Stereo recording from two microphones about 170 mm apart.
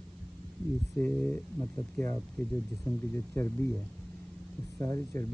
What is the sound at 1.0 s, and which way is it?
Speech, 10° left (ahead or behind).